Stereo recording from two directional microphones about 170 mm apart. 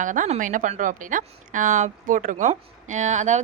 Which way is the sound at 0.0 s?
50° right (ahead or behind).